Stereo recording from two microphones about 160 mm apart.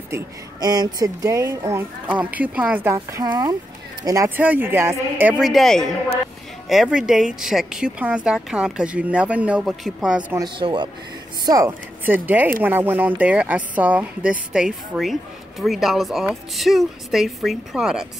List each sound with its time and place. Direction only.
0.1 s a woman's voice: 25° right (ahead or behind)
5.5 s speech: centre (ahead or behind)
10.3 s a woman's voice: 30° right (ahead or behind); by 18.0 s 5° right (ahead or behind)